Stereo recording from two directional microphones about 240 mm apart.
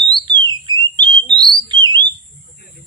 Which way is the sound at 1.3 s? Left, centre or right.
Centre.